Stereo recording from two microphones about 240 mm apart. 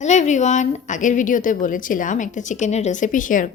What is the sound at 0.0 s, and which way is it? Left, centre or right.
A woman's voice, left.